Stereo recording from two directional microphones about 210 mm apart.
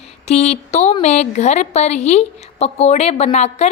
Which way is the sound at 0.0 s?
30° left (ahead or behind).